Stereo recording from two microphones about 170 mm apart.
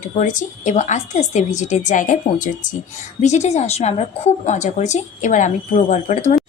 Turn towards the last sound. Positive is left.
turn(degrees=45)  # may be behind; listen again after turning